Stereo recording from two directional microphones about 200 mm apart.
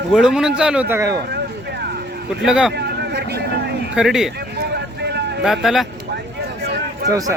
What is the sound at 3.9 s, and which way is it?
Speech, 5° right (ahead or behind).